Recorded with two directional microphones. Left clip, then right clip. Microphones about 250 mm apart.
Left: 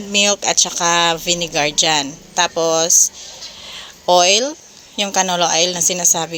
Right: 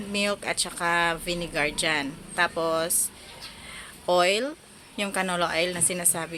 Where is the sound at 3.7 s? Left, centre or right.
Centre.